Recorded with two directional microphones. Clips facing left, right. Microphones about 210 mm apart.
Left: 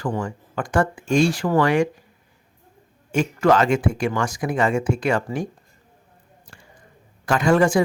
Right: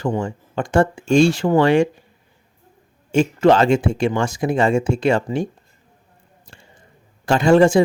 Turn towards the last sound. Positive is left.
turn(degrees=-25)  # may be behind; listen again after turning